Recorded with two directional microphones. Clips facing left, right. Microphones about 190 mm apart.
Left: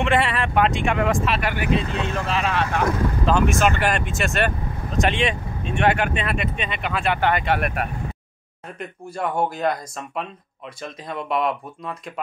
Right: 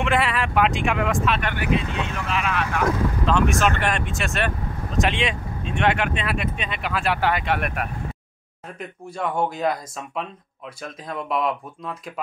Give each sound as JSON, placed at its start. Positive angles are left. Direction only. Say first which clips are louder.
{"t": 0.0, "sound": "speech", "louder": "left 1 dB", "side_deg": 0}
{"t": 1.7, "sound": "speech", "louder": "even", "side_deg": 35}
{"t": 3.3, "sound": "speech", "louder": "left 2 dB", "side_deg": 5}